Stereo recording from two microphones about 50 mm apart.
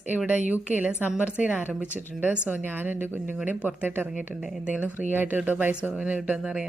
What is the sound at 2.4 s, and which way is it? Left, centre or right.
A woman's voice, right.